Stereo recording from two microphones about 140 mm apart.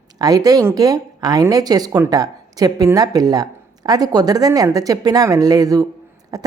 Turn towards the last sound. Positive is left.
turn(degrees=-25)  # may be behind; listen again after turning